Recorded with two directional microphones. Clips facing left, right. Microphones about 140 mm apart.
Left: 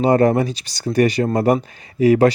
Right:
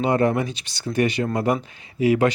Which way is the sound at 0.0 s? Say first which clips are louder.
Left 5 dB; 40° left (ahead or behind).